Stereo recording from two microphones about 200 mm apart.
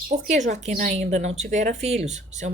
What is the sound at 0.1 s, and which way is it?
A woman's voice, 35° right (ahead or behind).